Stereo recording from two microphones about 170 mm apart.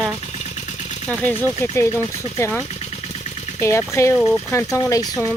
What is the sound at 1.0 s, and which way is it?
Speech, 5° left (ahead or behind).